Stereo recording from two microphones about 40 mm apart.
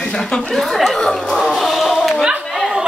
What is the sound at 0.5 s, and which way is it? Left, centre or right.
Speech, centre.